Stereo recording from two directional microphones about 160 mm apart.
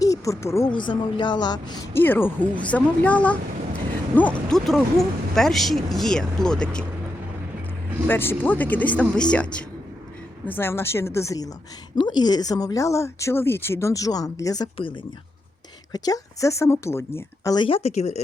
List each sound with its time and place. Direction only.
0.0 s speech: 20° left (ahead or behind)
0.7 s speech: 30° left (ahead or behind); by 6.8 s 5° left (ahead or behind)
8.0 s speech: 15° left (ahead or behind)
15.9 s speech: 25° left (ahead or behind); by 18.2 s 45° left (ahead or behind)